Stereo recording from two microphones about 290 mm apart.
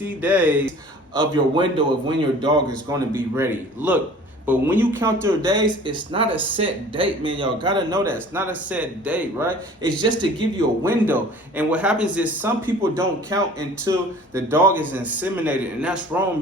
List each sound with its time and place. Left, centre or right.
0.0 s speech: centre
1.2 s speech: centre